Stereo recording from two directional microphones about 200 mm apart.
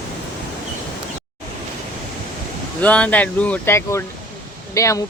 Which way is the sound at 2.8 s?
5° left (ahead or behind).